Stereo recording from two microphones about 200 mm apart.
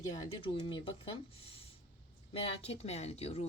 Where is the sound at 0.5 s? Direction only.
25° left (ahead or behind).